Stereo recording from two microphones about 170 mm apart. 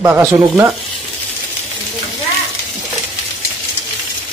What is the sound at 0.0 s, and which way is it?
Speech, 15° right (ahead or behind).